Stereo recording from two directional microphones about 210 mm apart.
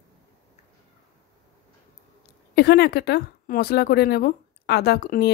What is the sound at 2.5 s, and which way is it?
A woman's voice, 50° left (ahead or behind).